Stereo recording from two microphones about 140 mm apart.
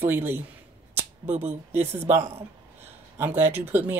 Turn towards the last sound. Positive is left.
turn(degrees=-15)  # may be behind; listen again after turning